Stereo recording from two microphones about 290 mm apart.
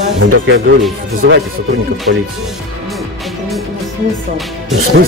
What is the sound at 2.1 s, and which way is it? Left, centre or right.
Speech, right.